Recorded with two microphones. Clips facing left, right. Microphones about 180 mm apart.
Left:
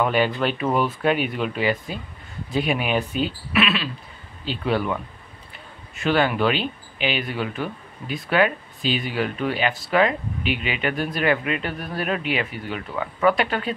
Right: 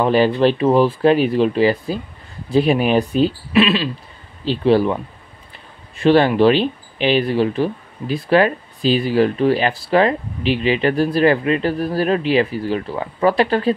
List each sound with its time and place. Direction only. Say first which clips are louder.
0.0 s speech: right 7 dB; 35° right (ahead or behind)